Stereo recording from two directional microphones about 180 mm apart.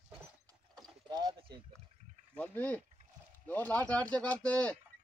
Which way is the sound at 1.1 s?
20° right (ahead or behind).